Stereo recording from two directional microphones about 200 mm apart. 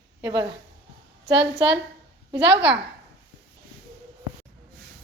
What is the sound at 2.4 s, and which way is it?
Speech, 60° right (ahead or behind).